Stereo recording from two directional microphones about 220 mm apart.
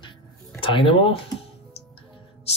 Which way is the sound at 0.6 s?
25° left (ahead or behind).